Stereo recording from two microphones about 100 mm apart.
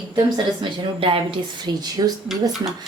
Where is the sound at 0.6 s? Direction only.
60° right (ahead or behind).